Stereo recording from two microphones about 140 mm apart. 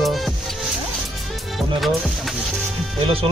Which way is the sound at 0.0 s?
Centre (ahead or behind).